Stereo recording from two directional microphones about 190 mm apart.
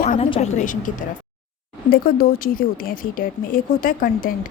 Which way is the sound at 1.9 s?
50° left (ahead or behind).